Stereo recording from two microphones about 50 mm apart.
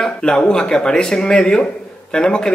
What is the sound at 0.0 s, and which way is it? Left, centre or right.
A man's voice, centre.